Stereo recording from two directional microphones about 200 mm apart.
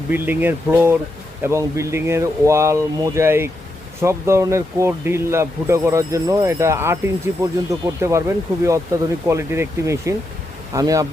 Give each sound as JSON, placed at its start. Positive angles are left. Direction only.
{"t": 0.1, "sound": "speech", "side_deg": -10}